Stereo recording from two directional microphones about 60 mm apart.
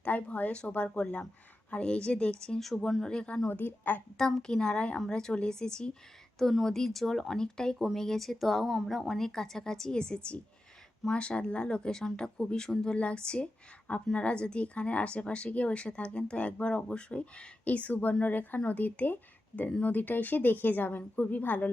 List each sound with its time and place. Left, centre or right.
0.0 s speech: left
3.5 s speech: left
4.4 s speech: centre; by 21.7 s left